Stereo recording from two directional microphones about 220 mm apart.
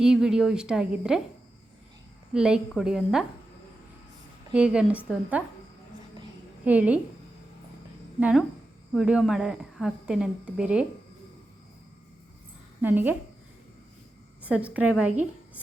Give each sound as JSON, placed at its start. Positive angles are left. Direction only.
{"t": 0.0, "sound": "speech", "side_deg": -5}
{"t": 2.3, "sound": "speech", "side_deg": -5}
{"t": 4.5, "sound": "speech", "side_deg": -5}
{"t": 6.7, "sound": "a woman's voice", "side_deg": -5}
{"t": 8.2, "sound": "speech", "side_deg": -5}
{"t": 12.8, "sound": "a woman's voice", "side_deg": -10}
{"t": 14.4, "sound": "a woman's voice", "side_deg": -5}